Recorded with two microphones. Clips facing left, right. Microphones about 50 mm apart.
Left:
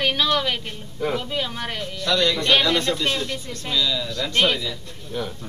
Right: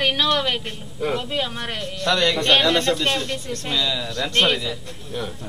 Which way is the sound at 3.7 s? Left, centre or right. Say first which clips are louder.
Left 1 dB; centre.